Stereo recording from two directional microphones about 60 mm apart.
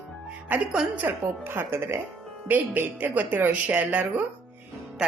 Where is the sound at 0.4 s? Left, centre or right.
Right.